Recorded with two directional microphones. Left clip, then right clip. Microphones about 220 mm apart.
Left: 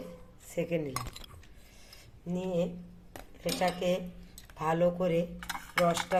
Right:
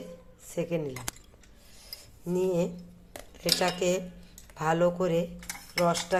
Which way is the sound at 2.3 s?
20° right (ahead or behind).